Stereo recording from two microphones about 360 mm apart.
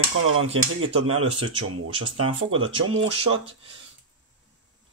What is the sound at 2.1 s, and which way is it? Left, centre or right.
Speech, right.